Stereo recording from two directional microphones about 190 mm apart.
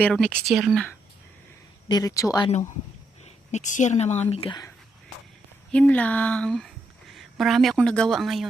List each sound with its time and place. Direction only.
0.0 s speech: 5° left (ahead or behind)
1.9 s speech: 20° left (ahead or behind)
3.2 s a woman's voice: 40° left (ahead or behind); by 4.7 s 25° left (ahead or behind)
5.7 s speech: 10° left (ahead or behind)